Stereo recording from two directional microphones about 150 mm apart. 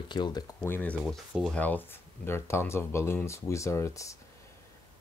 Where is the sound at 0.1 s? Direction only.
30° left (ahead or behind).